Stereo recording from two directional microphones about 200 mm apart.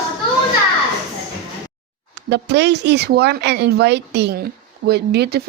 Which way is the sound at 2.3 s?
60° right (ahead or behind).